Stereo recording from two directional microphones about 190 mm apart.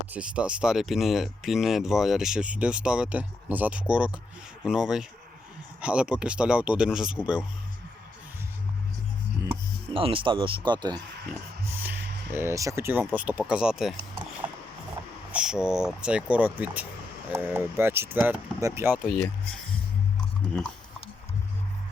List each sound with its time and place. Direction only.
0.1 s speech: 5° right (ahead or behind)
9.9 s speech: 30° right (ahead or behind)
11.8 s a sound: 10° right (ahead or behind)
13.1 s speech: 10° right (ahead or behind)
15.3 s speech: 5° right (ahead or behind)
19.0 s speech: 5° left (ahead or behind)